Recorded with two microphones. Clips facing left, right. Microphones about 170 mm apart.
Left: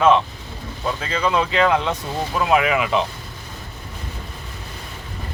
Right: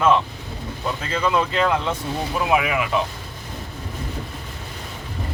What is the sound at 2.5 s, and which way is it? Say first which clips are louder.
Speech: left 3 dB; 5° right (ahead or behind).